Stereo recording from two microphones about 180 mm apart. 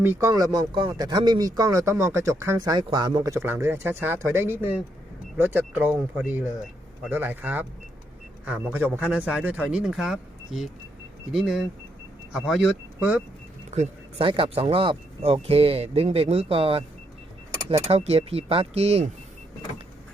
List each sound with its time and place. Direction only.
0.0 s speech: 15° right (ahead or behind)
13.7 s speech: 35° right (ahead or behind)
17.8 s speech: 35° right (ahead or behind)